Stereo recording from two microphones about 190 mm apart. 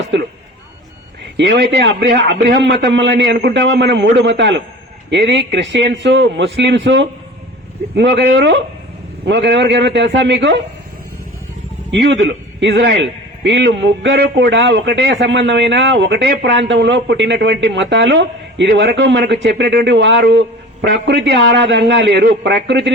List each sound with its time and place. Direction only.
0.1 s a man's voice: 65° right (ahead or behind)
1.4 s a man's voice: 65° right (ahead or behind)
11.9 s a man's voice: 70° right (ahead or behind)